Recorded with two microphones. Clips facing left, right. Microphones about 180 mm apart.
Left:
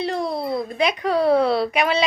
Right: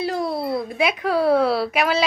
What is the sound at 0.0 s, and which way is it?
Speech, 5° right (ahead or behind).